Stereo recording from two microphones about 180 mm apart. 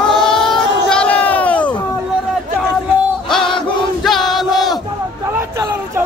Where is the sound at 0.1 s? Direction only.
5° left (ahead or behind).